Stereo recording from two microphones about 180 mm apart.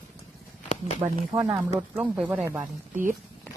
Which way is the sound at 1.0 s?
30° right (ahead or behind).